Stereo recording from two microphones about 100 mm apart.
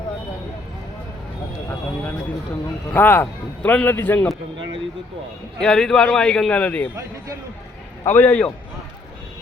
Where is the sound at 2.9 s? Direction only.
20° left (ahead or behind).